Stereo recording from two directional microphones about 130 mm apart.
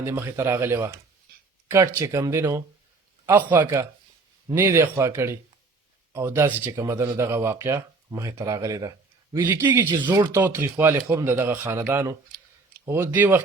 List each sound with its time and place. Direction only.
0.0 s speech: 20° right (ahead or behind)
9.9 s speech: 35° right (ahead or behind)
10.3 s speech: 15° right (ahead or behind)